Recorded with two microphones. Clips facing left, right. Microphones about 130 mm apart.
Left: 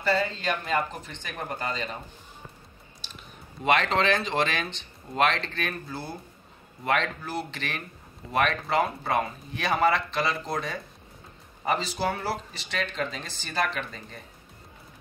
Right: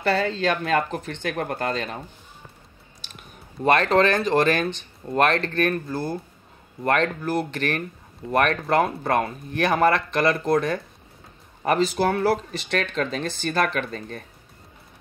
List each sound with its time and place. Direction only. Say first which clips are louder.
0.0 s speech: right 4 dB; 80° right; by 2.0 s 65° right (ahead or behind)
3.6 s speech: right 5 dB; 45° right (ahead or behind); by 14.2 s 65° right (ahead or behind)